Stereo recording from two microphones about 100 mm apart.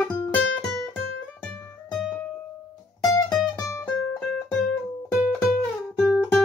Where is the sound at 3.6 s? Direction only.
35° left (ahead or behind).